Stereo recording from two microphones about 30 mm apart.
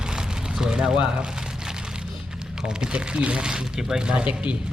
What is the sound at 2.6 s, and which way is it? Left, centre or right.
Speech, right.